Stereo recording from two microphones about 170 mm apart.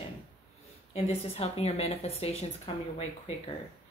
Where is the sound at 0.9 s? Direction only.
35° left (ahead or behind).